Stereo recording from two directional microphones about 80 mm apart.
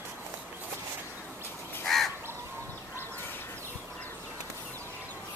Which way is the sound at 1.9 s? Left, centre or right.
Centre.